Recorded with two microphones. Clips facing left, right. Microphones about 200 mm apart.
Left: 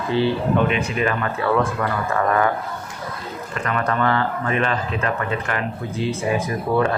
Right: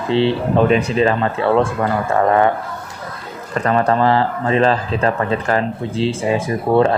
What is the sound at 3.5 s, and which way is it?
A man's voice, 35° right (ahead or behind).